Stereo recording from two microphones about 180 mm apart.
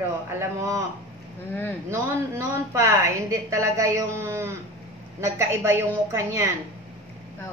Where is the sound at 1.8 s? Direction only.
15° right (ahead or behind).